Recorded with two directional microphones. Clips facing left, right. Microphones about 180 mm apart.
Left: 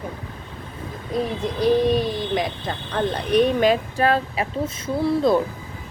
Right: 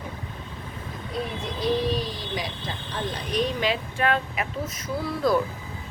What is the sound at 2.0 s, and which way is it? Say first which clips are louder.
Speech: left 8 dB; 55° left (ahead or behind).